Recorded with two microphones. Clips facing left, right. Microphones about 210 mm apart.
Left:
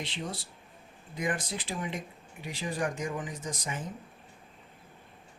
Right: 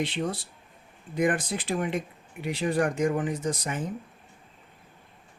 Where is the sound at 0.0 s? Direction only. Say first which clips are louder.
Right 8 dB; 60° right (ahead or behind).